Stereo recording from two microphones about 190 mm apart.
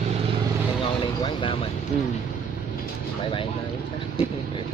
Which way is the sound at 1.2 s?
25° left (ahead or behind).